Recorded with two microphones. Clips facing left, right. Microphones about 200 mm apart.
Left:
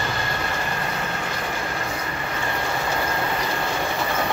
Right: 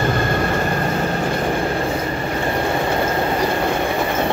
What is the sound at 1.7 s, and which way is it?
Train, 30° right (ahead or behind).